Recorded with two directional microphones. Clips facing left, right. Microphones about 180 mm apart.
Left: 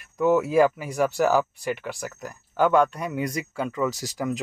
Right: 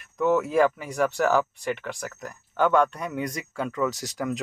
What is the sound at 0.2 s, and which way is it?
Speech, 5° left (ahead or behind).